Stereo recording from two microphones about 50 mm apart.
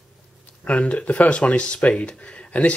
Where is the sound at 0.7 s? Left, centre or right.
Left.